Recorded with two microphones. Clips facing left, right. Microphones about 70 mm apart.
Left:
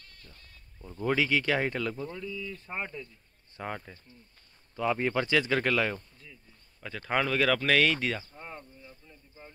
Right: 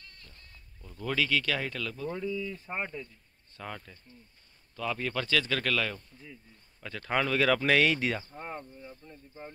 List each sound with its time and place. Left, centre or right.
0.3 s speech: centre
2.0 s speech: right
3.5 s speech: left
6.1 s speech: centre
6.8 s speech: centre
8.3 s speech: right